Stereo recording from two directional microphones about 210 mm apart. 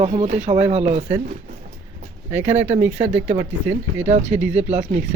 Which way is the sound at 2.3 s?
10° right (ahead or behind).